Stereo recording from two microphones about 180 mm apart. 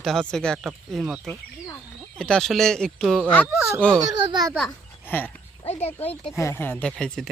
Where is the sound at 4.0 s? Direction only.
25° right (ahead or behind).